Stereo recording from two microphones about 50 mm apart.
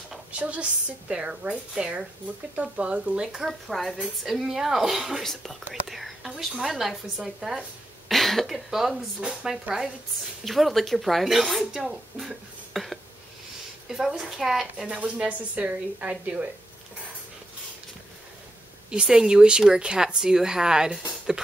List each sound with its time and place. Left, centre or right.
0.3 s speech: right
3.4 s speech: centre
8.5 s speech: centre
15.1 s speech: right
18.9 s speech: centre